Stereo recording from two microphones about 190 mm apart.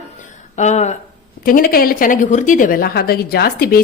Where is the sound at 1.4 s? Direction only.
50° left (ahead or behind).